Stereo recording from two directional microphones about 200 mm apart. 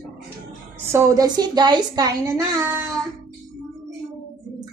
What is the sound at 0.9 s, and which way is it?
A woman's voice, 15° right (ahead or behind).